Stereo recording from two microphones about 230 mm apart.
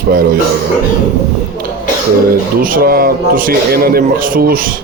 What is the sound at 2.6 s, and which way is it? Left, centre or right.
Speech, right.